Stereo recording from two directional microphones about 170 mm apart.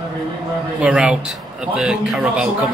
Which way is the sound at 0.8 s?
5° right (ahead or behind).